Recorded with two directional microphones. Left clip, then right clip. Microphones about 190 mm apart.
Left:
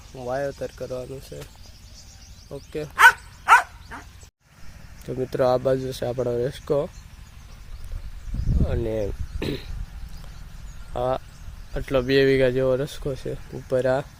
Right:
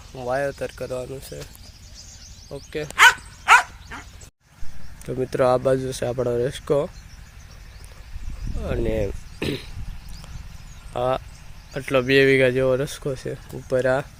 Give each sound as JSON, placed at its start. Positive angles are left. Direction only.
{"t": 0.1, "sound": "speech", "side_deg": -10}
{"t": 2.9, "sound": "dog", "side_deg": 30}
{"t": 5.0, "sound": "speech", "side_deg": -5}
{"t": 8.6, "sound": "speech", "side_deg": 0}
{"t": 10.9, "sound": "speech", "side_deg": 0}